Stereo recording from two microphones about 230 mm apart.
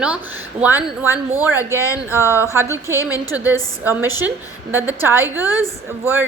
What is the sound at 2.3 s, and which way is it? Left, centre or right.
Speech, centre.